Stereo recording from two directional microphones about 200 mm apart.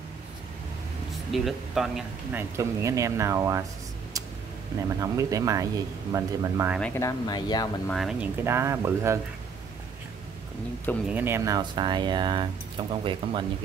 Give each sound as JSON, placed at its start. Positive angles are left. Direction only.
{"t": 1.3, "sound": "speech", "side_deg": 0}
{"t": 2.5, "sound": "speech", "side_deg": -15}
{"t": 4.8, "sound": "speech", "side_deg": -15}
{"t": 6.8, "sound": "speech", "side_deg": 15}
{"t": 7.9, "sound": "speech", "side_deg": 0}
{"t": 11.1, "sound": "speech", "side_deg": -10}